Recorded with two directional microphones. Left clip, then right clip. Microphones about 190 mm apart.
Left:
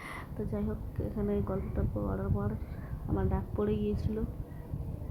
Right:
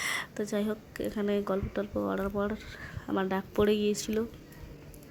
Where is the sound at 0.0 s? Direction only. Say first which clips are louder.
Right 8 dB; 30° right (ahead or behind).